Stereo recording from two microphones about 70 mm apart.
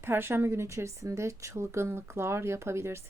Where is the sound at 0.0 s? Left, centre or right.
Right.